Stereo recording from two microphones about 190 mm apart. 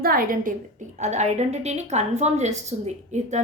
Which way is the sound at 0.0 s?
50° right (ahead or behind).